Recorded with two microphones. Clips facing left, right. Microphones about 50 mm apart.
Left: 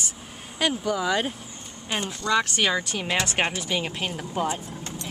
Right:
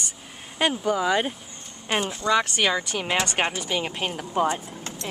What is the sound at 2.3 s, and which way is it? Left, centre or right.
Speech, centre.